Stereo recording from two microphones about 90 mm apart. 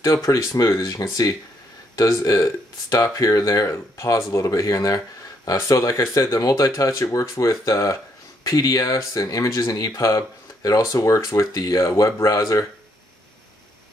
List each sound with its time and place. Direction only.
0.0 s speech: 40° left (ahead or behind)